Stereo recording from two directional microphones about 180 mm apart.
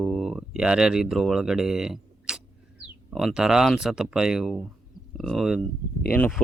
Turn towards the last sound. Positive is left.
turn(degrees=10)  # may be behind; listen again after turning